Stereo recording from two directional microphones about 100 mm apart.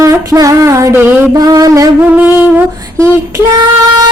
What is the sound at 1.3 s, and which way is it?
Music, 40° right (ahead or behind).